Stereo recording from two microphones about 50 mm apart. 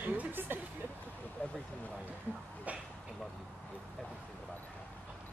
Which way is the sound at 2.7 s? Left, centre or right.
Right.